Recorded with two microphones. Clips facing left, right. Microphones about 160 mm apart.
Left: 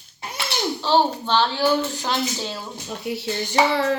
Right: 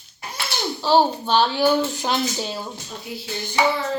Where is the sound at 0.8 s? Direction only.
10° right (ahead or behind).